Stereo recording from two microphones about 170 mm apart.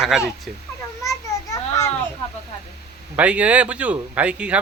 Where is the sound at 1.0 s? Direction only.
15° left (ahead or behind).